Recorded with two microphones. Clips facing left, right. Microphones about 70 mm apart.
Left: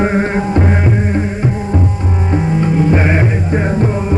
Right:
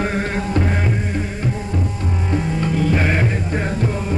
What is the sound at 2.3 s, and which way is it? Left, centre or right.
Music, left.